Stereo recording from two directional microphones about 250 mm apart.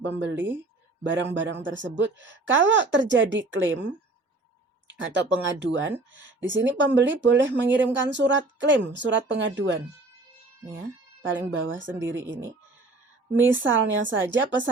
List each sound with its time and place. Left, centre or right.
0.0 s speech: right
5.0 s speech: right
11.2 s speech: right